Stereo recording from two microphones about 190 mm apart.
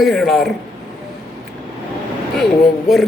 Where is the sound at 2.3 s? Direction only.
Centre (ahead or behind).